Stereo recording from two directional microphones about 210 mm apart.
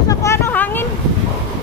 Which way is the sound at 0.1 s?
15° left (ahead or behind).